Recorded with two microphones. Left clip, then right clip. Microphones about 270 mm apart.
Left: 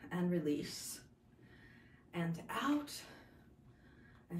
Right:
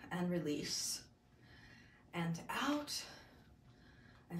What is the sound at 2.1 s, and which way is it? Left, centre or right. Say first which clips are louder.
Speech: even; centre.